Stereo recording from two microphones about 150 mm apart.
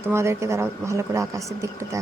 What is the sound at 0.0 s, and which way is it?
Speech, 15° right (ahead or behind).